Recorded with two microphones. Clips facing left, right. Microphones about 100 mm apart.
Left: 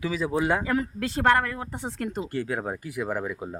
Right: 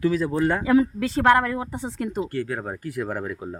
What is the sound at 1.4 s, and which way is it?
Speech, 20° right (ahead or behind).